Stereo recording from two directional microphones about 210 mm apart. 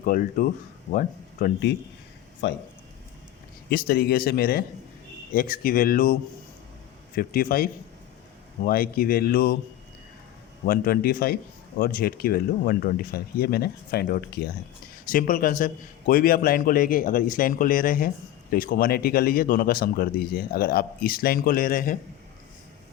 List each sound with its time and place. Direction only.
0.0 s a man's voice: 40° left (ahead or behind)
2.4 s speech: 55° left (ahead or behind)
3.7 s speech: 45° left (ahead or behind)
7.2 s speech: 45° left (ahead or behind)
10.7 s a man's voice: 45° left (ahead or behind)